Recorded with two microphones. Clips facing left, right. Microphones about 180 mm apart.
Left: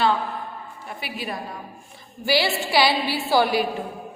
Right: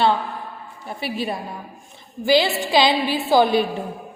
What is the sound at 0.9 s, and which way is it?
Speech, 30° right (ahead or behind).